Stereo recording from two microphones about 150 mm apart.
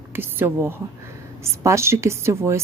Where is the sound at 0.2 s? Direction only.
15° right (ahead or behind).